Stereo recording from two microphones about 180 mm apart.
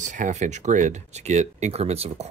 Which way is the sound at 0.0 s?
45° right (ahead or behind).